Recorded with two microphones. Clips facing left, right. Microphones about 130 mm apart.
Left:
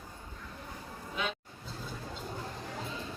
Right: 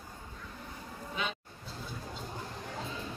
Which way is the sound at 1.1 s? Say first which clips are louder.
Left 1 dB; centre (ahead or behind).